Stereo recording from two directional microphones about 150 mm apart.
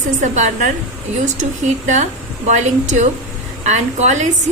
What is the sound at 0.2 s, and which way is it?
A woman's voice, 55° right (ahead or behind).